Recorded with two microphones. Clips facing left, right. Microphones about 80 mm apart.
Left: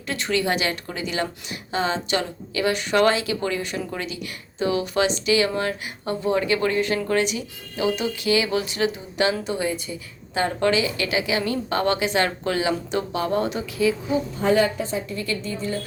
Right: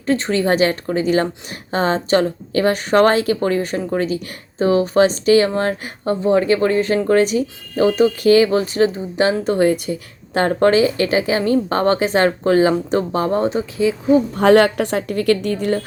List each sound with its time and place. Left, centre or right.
0.0 s a woman's voice: right
9.5 s a woman's voice: right
14.3 s a woman's voice: right